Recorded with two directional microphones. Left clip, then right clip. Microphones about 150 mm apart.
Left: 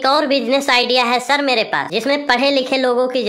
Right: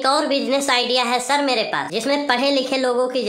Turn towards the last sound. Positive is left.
turn(degrees=25)  # may be behind; listen again after turning